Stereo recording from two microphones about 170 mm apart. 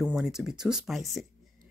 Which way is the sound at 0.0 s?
5° right (ahead or behind).